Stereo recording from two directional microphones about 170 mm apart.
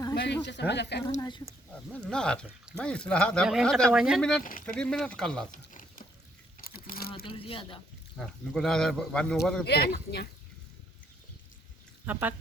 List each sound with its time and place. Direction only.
0.2 s speech: 90° left
1.7 s speech: 5° left (ahead or behind)
5.5 s a sound: 50° left (ahead or behind)
7.3 s speech: 35° left (ahead or behind)
8.2 s speech: 5° left (ahead or behind)
9.6 s speech: 65° left (ahead or behind)
12.1 s speech: 10° right (ahead or behind)